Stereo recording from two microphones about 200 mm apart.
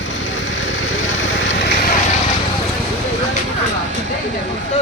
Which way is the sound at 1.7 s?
40° left (ahead or behind).